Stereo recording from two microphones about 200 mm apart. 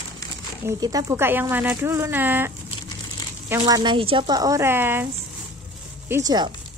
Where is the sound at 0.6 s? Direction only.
20° right (ahead or behind).